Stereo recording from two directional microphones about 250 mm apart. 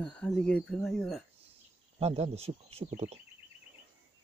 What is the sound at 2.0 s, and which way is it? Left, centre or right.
Speech, right.